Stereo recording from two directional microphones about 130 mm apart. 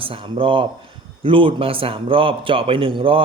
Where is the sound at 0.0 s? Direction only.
45° right (ahead or behind).